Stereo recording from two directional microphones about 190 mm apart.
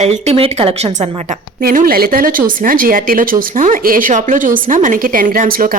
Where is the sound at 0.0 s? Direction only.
35° right (ahead or behind).